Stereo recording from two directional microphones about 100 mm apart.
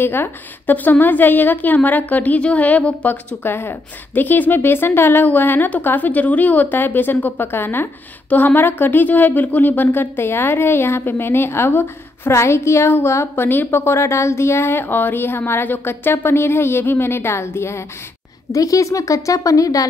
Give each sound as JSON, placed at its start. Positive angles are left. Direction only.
{"t": 0.0, "sound": "a woman's voice", "side_deg": 20}